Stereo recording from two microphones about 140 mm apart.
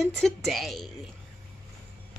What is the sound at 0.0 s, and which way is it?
Speech, centre (ahead or behind).